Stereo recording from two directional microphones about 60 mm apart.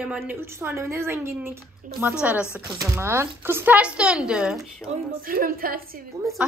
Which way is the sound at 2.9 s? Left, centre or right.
Right.